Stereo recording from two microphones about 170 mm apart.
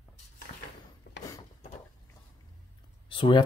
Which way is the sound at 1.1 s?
90° left.